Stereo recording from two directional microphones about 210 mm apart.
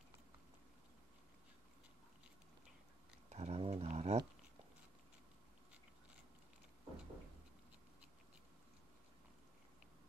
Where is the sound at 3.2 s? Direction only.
30° right (ahead or behind).